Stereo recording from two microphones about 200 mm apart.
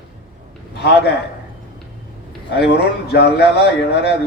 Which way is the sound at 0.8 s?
55° left (ahead or behind).